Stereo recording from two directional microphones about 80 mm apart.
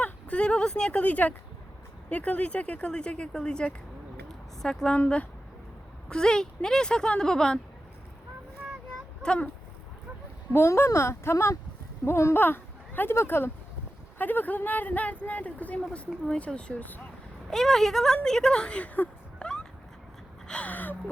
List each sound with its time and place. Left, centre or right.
0.0 s speech: centre
9.2 s speech: centre
10.5 s speech: left; by 16.0 s centre
16.0 s speech: centre
17.5 s speech: centre
20.5 s gasp: centre